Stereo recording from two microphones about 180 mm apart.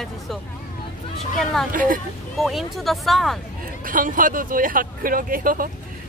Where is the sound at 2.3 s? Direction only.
Centre (ahead or behind).